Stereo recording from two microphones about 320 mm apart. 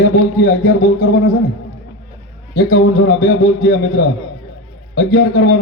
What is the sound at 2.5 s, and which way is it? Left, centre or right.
A man's voice, left.